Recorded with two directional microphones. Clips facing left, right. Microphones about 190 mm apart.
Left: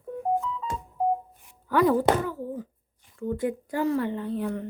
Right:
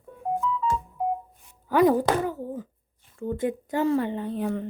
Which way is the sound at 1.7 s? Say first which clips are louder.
Right 1 dB; 15° right (ahead or behind).